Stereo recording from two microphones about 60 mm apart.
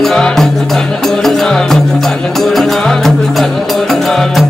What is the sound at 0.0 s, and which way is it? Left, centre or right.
Music, centre.